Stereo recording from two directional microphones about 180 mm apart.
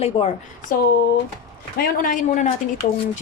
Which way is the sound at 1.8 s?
45° left (ahead or behind).